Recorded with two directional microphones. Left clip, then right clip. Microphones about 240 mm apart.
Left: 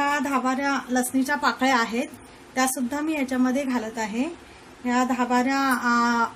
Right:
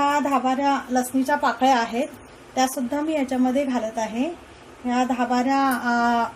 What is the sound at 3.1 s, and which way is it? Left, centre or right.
A woman's voice, left.